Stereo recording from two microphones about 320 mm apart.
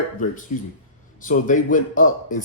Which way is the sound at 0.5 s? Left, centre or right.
Left.